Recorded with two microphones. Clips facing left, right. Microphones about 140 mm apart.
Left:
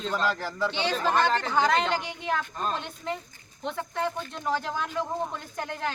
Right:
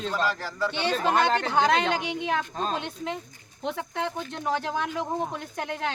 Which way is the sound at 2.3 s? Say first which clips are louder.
Left 1 dB; 90° right.